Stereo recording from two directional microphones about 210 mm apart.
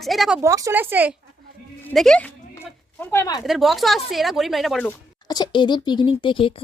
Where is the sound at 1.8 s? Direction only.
5° left (ahead or behind).